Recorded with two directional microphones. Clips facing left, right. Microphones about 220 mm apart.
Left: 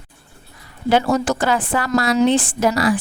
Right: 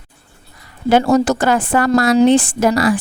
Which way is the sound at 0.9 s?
45° right (ahead or behind).